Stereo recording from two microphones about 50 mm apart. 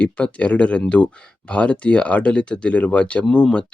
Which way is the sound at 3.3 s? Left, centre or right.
Centre.